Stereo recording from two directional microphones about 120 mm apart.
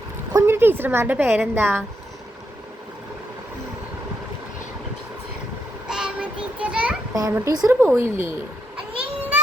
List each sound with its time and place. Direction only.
0.3 s a woman's voice: 20° right (ahead or behind)
5.9 s child singing: 5° right (ahead or behind)
7.1 s a child's voice: 25° right (ahead or behind)